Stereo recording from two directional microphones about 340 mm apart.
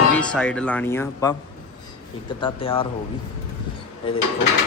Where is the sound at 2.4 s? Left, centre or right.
Centre.